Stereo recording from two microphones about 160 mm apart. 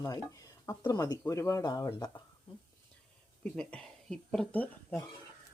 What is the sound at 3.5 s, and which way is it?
Speech, 5° left (ahead or behind).